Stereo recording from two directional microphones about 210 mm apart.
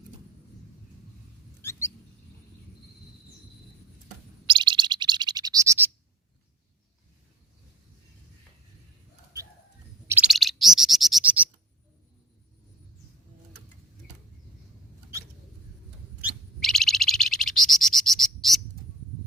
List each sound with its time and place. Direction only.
4.4 s bird: 20° right (ahead or behind)
10.1 s bird: 5° right (ahead or behind)
16.2 s bird: centre (ahead or behind)